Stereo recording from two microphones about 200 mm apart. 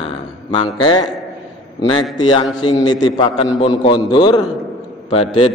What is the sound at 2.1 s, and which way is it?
A man's voice, 20° left (ahead or behind).